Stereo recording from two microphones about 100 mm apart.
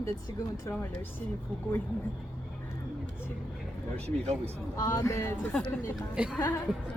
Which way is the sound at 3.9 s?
90° right.